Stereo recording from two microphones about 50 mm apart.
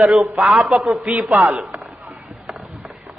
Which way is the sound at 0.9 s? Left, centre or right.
Right.